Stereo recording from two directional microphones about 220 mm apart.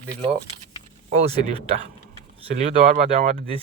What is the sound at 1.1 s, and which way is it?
Speech, 25° right (ahead or behind).